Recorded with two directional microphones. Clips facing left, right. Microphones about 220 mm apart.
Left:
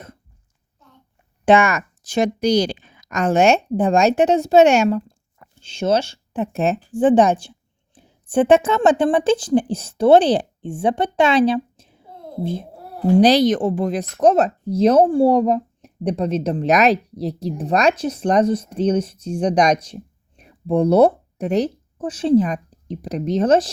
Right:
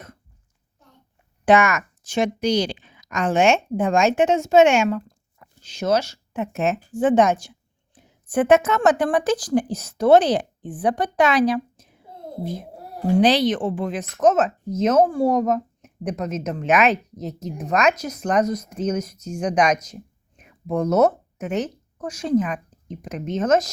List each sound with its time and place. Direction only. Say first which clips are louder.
1.5 s a woman's voice: left 2 dB; 30° left (ahead or behind)
13.1 s speech: left 4 dB; 40° left (ahead or behind)